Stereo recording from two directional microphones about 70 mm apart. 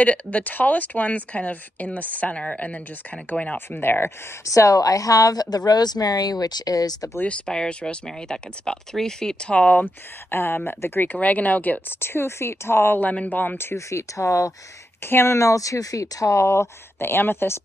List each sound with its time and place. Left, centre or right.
0.0 s speech: centre
4.5 s speech: left
7.2 s speech: centre
10.3 s speech: left
12.0 s speech: left
13.1 s speech: left
13.8 s speech: left
15.0 s speech: left